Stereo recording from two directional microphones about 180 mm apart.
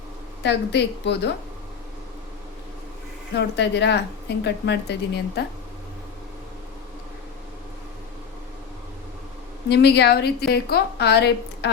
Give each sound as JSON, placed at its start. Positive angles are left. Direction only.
{"t": 0.4, "sound": "speech", "side_deg": 70}
{"t": 3.3, "sound": "speech", "side_deg": 70}
{"t": 9.6, "sound": "a woman's voice", "side_deg": 65}